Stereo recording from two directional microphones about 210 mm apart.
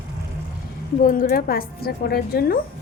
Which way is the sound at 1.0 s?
40° left (ahead or behind).